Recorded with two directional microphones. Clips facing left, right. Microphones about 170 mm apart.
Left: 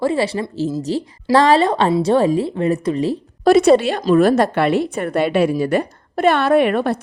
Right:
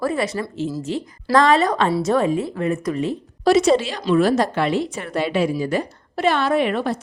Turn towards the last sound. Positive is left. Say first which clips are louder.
# left 5 dB
turn(degrees=60)  # may be behind; listen again after turning